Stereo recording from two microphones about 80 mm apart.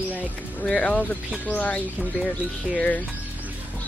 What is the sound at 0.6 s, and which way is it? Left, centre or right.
Speech, centre.